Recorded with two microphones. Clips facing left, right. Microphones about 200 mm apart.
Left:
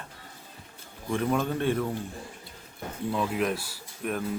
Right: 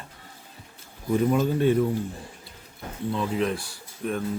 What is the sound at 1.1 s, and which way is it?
Speech, 5° right (ahead or behind).